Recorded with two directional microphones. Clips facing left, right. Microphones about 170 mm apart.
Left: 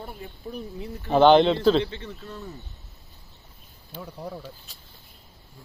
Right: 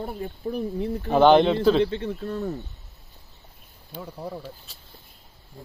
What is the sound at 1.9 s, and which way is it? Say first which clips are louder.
Speech: right 9 dB; 55° right (ahead or behind).